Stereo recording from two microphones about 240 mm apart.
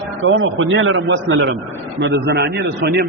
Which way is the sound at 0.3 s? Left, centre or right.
Right.